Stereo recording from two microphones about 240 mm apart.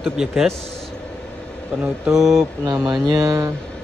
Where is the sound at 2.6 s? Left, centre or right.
Centre.